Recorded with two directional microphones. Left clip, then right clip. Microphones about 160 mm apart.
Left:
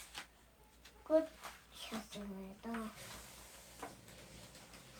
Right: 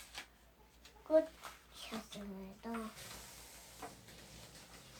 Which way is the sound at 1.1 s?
Centre (ahead or behind).